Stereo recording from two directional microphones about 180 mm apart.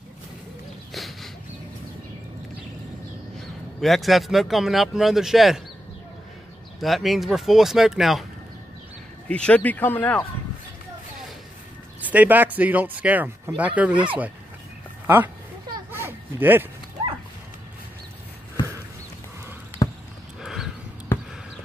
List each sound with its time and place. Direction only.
0.9 s a sound: centre (ahead or behind)
3.8 s speech: centre (ahead or behind)
6.8 s speech: centre (ahead or behind)
9.3 s speech: 5° left (ahead or behind)
12.0 s speech: 10° right (ahead or behind)
13.9 s speech: 30° right (ahead or behind)
15.0 s speech: 10° right (ahead or behind)
15.9 s a sound: 10° right (ahead or behind)
19.8 s basketball bounce: 20° left (ahead or behind)
20.4 s a sound: centre (ahead or behind)